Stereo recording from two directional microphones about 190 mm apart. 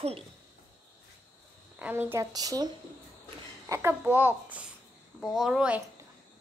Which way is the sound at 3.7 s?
15° right (ahead or behind).